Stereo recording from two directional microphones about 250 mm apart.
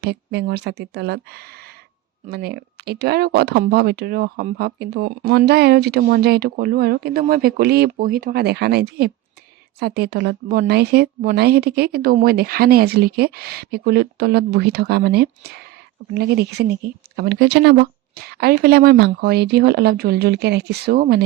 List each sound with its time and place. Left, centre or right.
0.0 s speech: right